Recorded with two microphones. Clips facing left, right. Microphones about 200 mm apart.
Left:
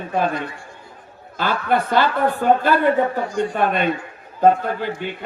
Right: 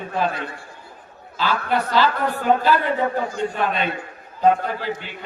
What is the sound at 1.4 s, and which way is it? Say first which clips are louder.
Speech: left 2 dB; 55° left (ahead or behind).